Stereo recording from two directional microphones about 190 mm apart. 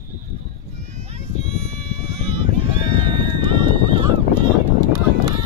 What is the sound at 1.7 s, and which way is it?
Vehicle, 35° right (ahead or behind).